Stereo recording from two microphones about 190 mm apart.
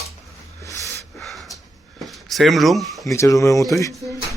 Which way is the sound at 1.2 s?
Centre (ahead or behind).